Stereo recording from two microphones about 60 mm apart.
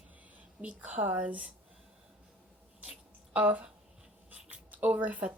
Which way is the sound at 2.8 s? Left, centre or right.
Centre.